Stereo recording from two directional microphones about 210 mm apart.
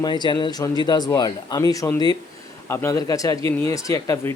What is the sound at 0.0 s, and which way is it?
Speech, 20° left (ahead or behind).